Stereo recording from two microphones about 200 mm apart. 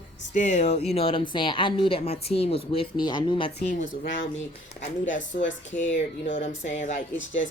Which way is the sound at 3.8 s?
70° left (ahead or behind).